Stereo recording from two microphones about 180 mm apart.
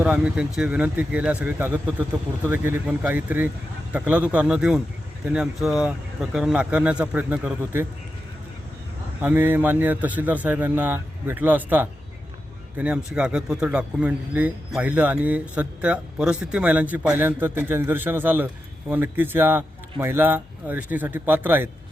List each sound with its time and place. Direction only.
0.0 s a man's voice: 5° right (ahead or behind)
9.2 s a man's voice: 10° right (ahead or behind)